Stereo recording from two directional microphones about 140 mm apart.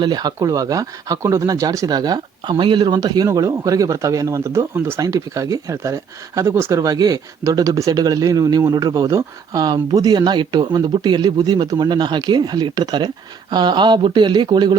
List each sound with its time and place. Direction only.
0.0 s speech: 30° right (ahead or behind)